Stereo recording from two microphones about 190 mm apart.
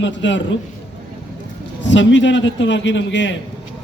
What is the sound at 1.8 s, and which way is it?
A man's voice, 70° left (ahead or behind).